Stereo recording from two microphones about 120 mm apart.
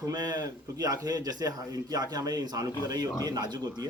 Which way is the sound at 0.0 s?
30° right (ahead or behind).